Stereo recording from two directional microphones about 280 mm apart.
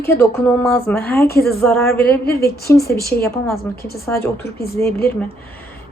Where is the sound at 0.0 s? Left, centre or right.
Centre.